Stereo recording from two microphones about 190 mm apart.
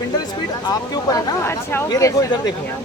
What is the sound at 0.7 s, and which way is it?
Speech, 20° left (ahead or behind).